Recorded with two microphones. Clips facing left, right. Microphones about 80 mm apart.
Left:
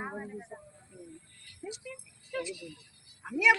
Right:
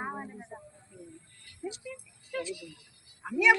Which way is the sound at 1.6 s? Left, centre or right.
Centre.